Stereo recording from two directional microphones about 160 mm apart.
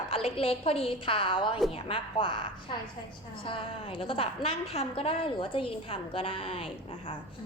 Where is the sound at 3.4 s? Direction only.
35° left (ahead or behind).